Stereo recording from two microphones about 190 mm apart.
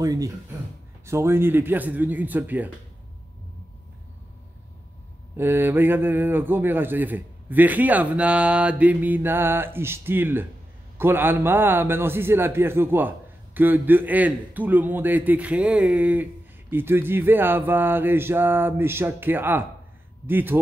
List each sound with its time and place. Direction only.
0.0 s a man's voice: 20° right (ahead or behind)
5.4 s a man's voice: 10° right (ahead or behind)